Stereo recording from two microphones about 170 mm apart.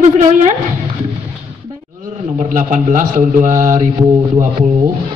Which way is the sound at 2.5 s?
50° right (ahead or behind).